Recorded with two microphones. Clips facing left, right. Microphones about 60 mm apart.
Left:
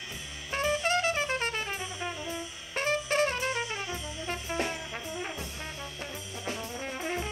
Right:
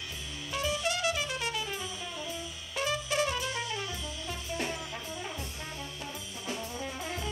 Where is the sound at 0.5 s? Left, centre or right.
Left.